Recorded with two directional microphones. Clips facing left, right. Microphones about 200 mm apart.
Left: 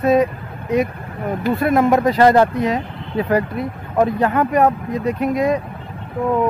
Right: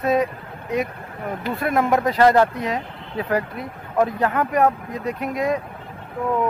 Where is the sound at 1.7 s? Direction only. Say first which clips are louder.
Left 4 dB; 25° left (ahead or behind).